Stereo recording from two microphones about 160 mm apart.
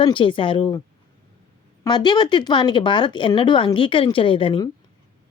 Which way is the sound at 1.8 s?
25° left (ahead or behind).